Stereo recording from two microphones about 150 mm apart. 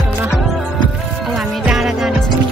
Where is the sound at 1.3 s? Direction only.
5° right (ahead or behind).